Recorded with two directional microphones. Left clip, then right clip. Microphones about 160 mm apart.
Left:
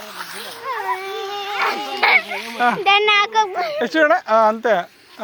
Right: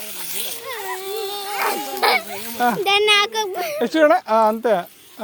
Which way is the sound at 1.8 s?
50° right (ahead or behind).